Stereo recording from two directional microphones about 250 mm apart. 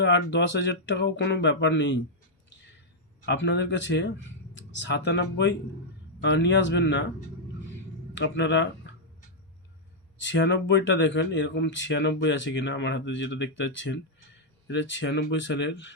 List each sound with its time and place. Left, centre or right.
0.0 s speech: left
3.2 s speech: left
8.1 s speech: left
10.2 s speech: left